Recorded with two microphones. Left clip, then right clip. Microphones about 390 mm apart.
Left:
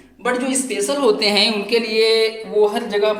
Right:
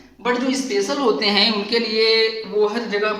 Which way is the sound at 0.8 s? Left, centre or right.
Centre.